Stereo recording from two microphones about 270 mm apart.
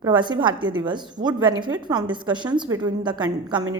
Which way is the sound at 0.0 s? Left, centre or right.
Centre.